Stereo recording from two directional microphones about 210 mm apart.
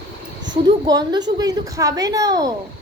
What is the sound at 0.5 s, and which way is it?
A woman's voice, 20° right (ahead or behind).